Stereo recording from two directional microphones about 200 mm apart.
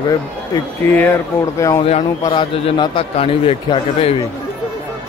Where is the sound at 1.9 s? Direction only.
25° left (ahead or behind).